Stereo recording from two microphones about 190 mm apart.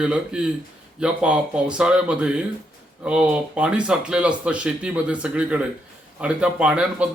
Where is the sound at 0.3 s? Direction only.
5° right (ahead or behind).